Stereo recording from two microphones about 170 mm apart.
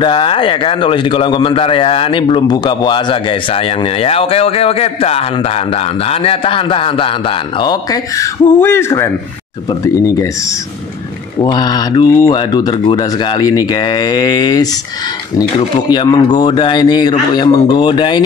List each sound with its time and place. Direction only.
0.0 s a man's voice: 30° left (ahead or behind)
11.4 s a man's voice: 25° left (ahead or behind)
15.9 s a man's voice: 25° left (ahead or behind)